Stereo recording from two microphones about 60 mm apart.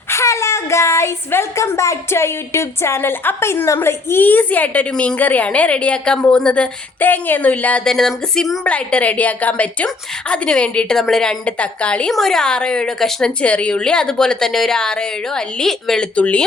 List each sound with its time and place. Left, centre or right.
0.1 s a woman's voice: left; by 6.7 s centre
7.0 s a woman's voice: left
7.9 s speech: centre
8.6 s a woman's voice: left
12.1 s a woman's voice: centre
13.4 s a woman's voice: left